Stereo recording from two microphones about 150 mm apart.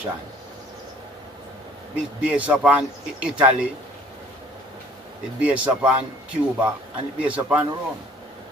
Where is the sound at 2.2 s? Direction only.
5° right (ahead or behind).